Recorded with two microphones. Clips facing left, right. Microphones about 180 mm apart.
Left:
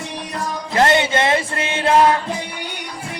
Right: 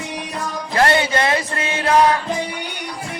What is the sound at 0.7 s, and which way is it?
Music, 20° left (ahead or behind).